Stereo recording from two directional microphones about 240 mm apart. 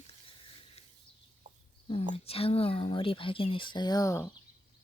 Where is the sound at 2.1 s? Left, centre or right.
Left.